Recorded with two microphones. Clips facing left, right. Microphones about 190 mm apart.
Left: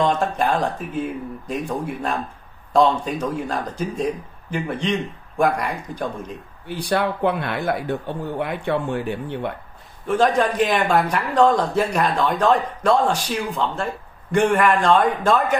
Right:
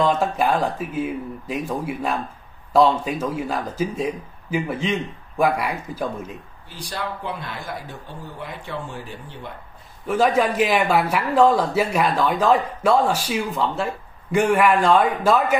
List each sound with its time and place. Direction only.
0.0 s speech: 5° right (ahead or behind)
6.7 s speech: 60° left (ahead or behind)
10.0 s speech: 5° right (ahead or behind)